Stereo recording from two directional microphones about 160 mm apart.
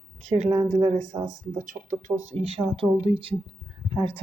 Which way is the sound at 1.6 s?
55° right (ahead or behind).